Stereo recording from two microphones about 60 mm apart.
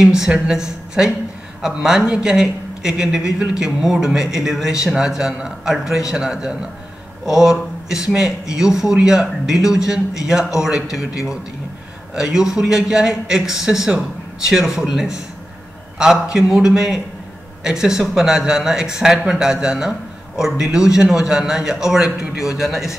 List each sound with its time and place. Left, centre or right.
0.0 s speech: centre